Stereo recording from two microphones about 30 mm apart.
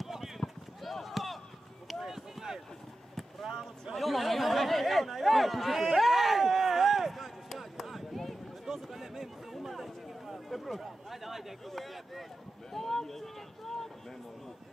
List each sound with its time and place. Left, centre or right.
0.0 s clip-clop: centre
0.4 s clip-clop: centre
1.0 s chop: centre
2.0 s run: centre
3.4 s a sound: centre
3.9 s chatter: centre
5.9 s a sound: centre
12.7 s boat: centre